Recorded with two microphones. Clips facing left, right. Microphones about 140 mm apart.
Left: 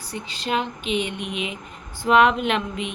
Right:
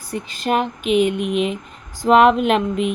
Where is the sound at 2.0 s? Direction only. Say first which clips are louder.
Right 5 dB; 40° right (ahead or behind).